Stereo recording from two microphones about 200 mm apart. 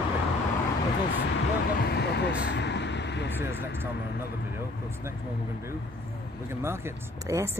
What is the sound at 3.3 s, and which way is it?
Speech, 10° right (ahead or behind).